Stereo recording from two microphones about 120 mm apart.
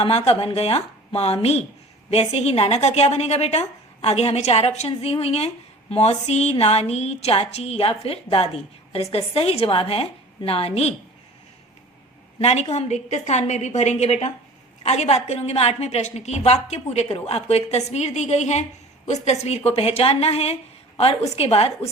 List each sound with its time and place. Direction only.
0.0 s a woman's voice: 55° left (ahead or behind)
12.4 s a woman's voice: 60° left (ahead or behind)
12.7 s a woman's voice: 70° left (ahead or behind)